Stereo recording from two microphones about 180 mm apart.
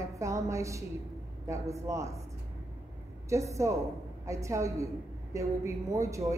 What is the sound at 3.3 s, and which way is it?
A woman's voice, 15° right (ahead or behind).